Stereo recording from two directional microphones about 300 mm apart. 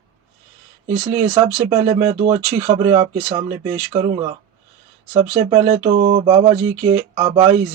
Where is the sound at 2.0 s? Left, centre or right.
Centre.